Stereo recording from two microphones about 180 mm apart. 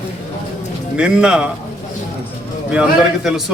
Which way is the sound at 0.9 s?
5° right (ahead or behind).